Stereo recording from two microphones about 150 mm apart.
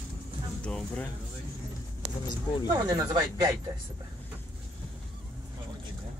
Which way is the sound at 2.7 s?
20° right (ahead or behind).